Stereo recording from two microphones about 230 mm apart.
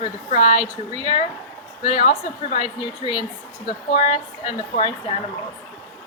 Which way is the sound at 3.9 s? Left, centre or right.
Left.